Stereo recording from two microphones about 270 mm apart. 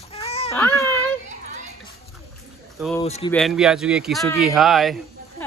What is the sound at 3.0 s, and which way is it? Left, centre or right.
Speech, left.